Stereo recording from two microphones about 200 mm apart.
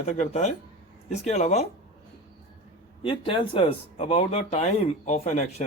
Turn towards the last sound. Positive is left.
turn(degrees=30)  # may be behind; listen again after turning